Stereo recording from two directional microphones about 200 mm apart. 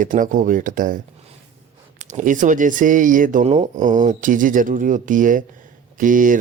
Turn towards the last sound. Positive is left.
turn(degrees=-40)  # may be behind; listen again after turning